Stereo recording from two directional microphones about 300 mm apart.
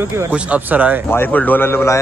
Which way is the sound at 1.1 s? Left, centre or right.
Centre.